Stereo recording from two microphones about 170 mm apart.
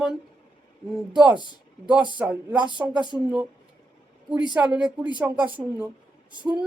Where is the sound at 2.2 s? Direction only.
5° right (ahead or behind).